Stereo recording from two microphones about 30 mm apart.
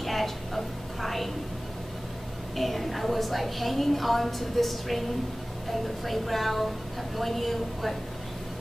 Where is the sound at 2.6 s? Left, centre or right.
Centre.